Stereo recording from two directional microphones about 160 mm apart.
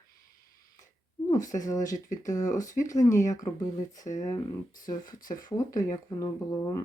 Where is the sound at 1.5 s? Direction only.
20° left (ahead or behind).